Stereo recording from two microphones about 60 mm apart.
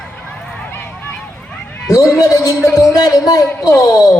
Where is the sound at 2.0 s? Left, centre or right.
Left.